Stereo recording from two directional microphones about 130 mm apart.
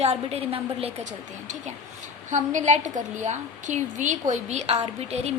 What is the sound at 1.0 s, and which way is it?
A woman's voice, 70° right (ahead or behind).